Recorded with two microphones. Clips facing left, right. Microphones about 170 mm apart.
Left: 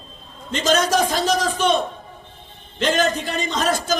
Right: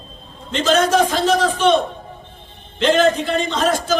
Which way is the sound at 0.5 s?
40° left (ahead or behind).